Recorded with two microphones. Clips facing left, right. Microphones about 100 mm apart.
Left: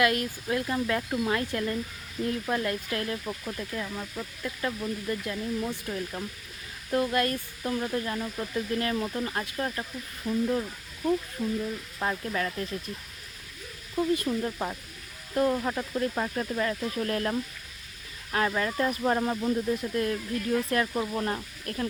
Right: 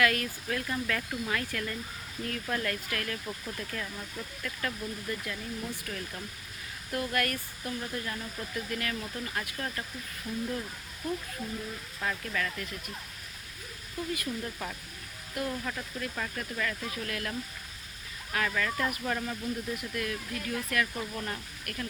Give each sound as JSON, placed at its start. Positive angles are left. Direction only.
{"t": 0.0, "sound": "speech", "side_deg": 25}
{"t": 11.9, "sound": "speech", "side_deg": 30}
{"t": 13.9, "sound": "speech", "side_deg": 35}
{"t": 19.7, "sound": "speech", "side_deg": 30}